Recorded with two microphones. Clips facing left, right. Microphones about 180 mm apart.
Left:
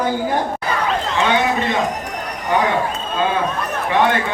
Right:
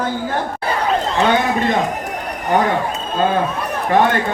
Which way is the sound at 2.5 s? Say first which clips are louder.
Right 2 dB; 45° right (ahead or behind).